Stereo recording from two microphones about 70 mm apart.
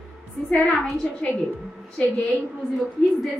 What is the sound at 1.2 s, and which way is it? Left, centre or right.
Speech, centre.